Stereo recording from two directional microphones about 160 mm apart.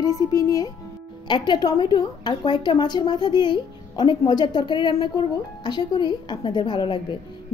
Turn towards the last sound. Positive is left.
turn(degrees=30)  # may be behind; listen again after turning